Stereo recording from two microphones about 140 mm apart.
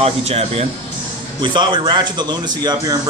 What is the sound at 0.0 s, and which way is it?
Speech, 50° right (ahead or behind).